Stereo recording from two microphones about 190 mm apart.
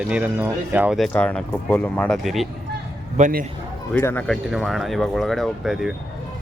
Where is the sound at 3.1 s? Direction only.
40° right (ahead or behind).